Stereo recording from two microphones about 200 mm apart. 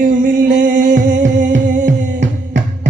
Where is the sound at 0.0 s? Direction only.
40° right (ahead or behind).